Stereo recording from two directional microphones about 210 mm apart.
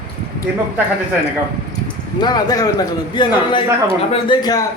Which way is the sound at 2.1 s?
20° left (ahead or behind).